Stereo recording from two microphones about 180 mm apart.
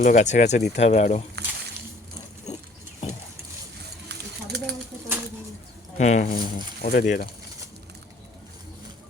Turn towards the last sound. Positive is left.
turn(degrees=55)  # may be behind; listen again after turning